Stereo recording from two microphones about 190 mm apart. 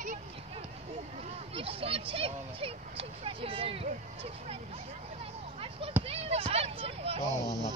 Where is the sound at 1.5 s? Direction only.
30° right (ahead or behind).